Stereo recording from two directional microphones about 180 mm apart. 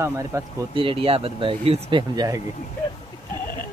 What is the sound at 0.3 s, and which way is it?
Speech, 15° right (ahead or behind).